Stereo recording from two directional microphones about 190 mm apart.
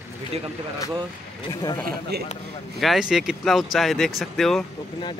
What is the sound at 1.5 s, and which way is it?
Speech, 20° left (ahead or behind).